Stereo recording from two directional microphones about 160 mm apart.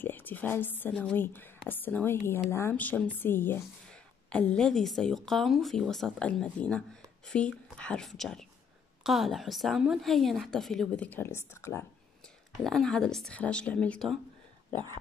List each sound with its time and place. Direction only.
0.0 s a woman's voice: 10° left (ahead or behind)
12.6 s a woman's voice: 5° left (ahead or behind)
14.7 s speech: 30° right (ahead or behind)